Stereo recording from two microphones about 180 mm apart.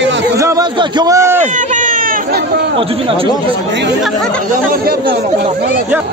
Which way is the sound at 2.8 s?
30° right (ahead or behind).